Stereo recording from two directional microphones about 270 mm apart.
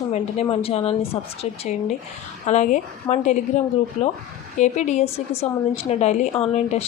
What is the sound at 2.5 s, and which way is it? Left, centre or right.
Speech, left.